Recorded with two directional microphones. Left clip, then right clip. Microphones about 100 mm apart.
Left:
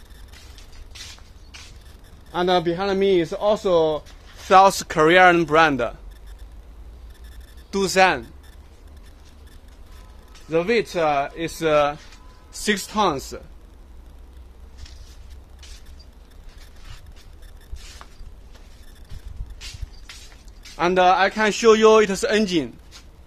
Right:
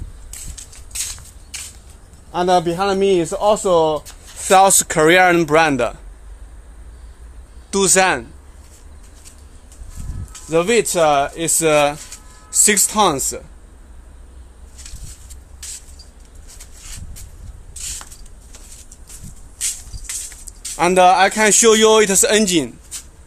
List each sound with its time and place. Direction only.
2.3 s a man's voice: 10° left (ahead or behind)
4.5 s a man's voice: 15° right (ahead or behind)
7.7 s speech: 25° right (ahead or behind)
10.5 s speech: 45° right (ahead or behind)
12.4 s speech: 30° right (ahead or behind)
20.7 s speech: 30° right (ahead or behind)